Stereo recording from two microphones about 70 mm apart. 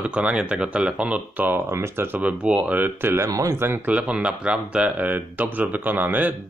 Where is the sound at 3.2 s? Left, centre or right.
Right.